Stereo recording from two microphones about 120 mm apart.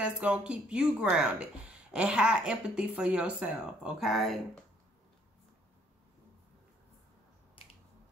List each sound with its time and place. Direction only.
0.0 s speech: 10° right (ahead or behind)